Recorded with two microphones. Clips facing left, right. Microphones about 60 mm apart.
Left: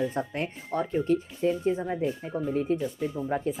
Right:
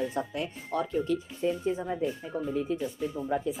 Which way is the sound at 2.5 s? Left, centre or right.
Left.